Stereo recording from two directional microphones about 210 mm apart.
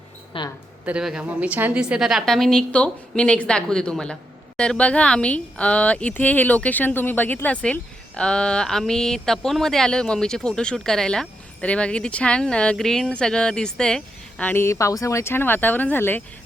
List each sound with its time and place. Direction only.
0.3 s speech: 25° left (ahead or behind)
0.9 s a woman's voice: 5° right (ahead or behind)